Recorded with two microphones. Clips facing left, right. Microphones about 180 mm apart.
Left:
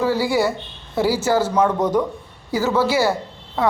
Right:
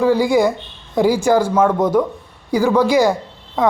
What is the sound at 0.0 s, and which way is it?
Speech, 15° right (ahead or behind).